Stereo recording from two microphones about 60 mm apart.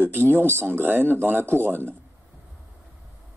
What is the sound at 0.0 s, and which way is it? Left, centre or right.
Speech, right.